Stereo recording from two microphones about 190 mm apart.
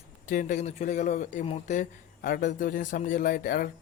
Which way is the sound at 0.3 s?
40° left (ahead or behind).